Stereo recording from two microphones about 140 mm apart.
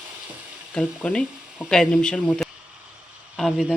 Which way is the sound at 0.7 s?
5° left (ahead or behind).